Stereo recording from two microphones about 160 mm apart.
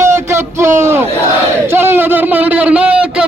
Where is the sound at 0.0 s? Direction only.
15° right (ahead or behind).